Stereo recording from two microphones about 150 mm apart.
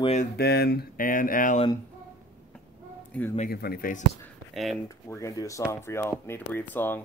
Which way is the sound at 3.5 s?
90° left.